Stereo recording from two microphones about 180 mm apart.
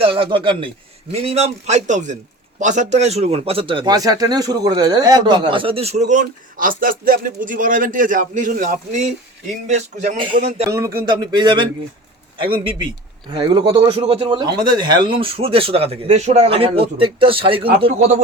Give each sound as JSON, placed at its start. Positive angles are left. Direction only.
{"t": 0.0, "sound": "speech", "side_deg": -30}
{"t": 9.6, "sound": "speech", "side_deg": -40}
{"t": 10.7, "sound": "speech", "side_deg": -20}
{"t": 13.3, "sound": "speech", "side_deg": -25}